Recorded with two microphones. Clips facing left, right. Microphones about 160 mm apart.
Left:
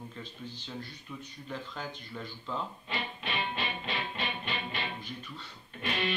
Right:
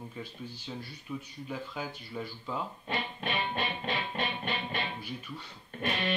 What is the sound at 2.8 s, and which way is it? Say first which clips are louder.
Music: right 3 dB; 50° right (ahead or behind).